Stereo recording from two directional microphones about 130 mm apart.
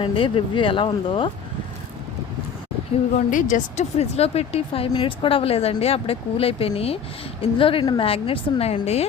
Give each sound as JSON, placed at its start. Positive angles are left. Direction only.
{"t": 0.0, "sound": "speech", "side_deg": 40}
{"t": 3.2, "sound": "a woman's voice", "side_deg": 85}
{"t": 3.9, "sound": "speech", "side_deg": 55}